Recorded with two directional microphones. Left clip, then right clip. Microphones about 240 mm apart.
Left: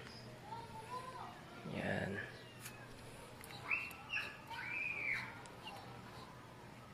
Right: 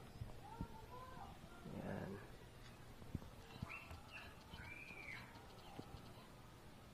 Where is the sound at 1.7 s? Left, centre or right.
Centre.